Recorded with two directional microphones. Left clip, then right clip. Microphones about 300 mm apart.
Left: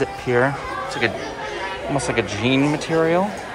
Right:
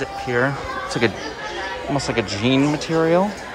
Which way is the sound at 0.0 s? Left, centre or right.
Centre.